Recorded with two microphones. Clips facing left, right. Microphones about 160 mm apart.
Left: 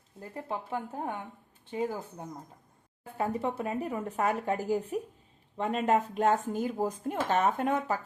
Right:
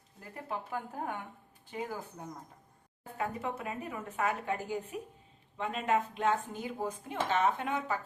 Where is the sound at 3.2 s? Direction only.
30° left (ahead or behind).